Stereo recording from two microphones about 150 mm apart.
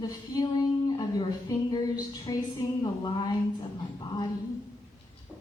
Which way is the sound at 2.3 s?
25° left (ahead or behind).